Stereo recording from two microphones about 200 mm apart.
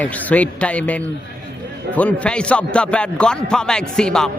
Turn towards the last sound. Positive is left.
turn(degrees=5)  # may be behind; listen again after turning